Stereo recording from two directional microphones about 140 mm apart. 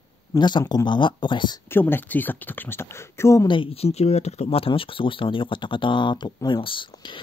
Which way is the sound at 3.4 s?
40° left (ahead or behind).